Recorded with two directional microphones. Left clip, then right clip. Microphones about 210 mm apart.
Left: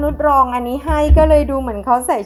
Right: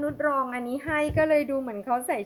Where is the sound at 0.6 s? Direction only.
25° right (ahead or behind).